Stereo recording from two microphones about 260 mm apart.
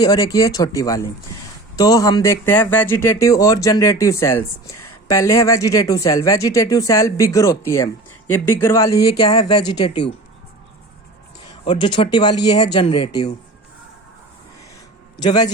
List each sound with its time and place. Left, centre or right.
0.0 s speech: centre
11.6 s speech: centre
15.2 s speech: centre